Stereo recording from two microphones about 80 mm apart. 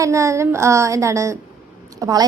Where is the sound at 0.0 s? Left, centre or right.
Right.